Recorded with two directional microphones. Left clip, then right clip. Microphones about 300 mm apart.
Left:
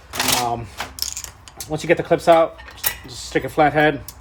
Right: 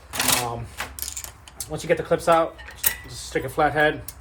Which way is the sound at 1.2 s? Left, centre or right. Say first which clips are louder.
Left 5 dB; left.